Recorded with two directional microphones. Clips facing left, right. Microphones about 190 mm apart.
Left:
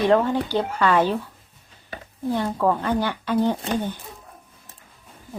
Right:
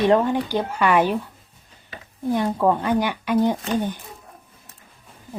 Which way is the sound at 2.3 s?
15° right (ahead or behind).